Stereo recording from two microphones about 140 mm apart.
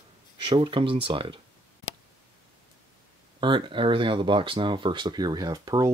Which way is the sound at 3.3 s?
35° right (ahead or behind).